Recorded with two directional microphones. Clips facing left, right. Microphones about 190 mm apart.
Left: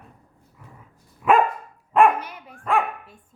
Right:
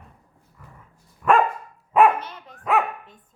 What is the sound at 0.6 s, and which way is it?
Dog, 10° left (ahead or behind).